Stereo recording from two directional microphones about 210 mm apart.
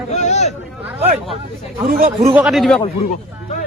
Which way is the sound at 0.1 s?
35° left (ahead or behind).